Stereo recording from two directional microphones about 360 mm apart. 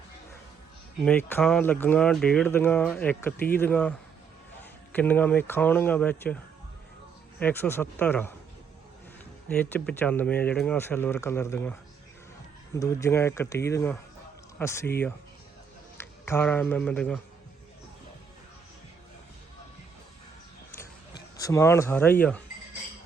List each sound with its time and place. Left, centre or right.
1.0 s speech: centre
9.5 s speech: centre
21.3 s speech: centre